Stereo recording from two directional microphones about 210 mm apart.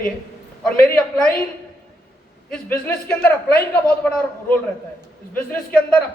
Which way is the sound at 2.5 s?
5° left (ahead or behind).